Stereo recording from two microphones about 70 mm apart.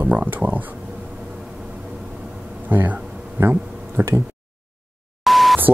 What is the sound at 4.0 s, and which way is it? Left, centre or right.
Speech, right.